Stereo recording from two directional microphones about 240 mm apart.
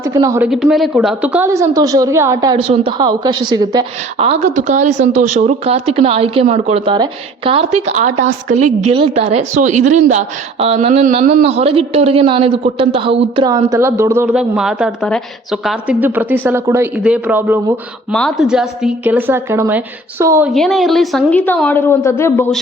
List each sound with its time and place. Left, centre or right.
0.0 s a woman's voice: centre
20.5 s a woman's voice: centre